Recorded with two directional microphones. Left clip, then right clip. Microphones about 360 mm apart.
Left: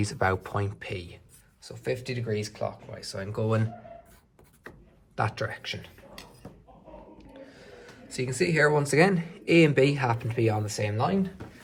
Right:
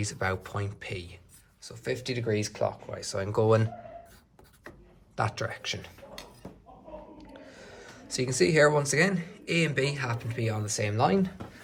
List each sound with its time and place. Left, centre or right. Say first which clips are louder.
0.0 s speech: left 4 dB; centre
2.3 s speech: right 2 dB; centre
5.1 s speech: left 1 dB; centre
8.1 s speech: right 2 dB; centre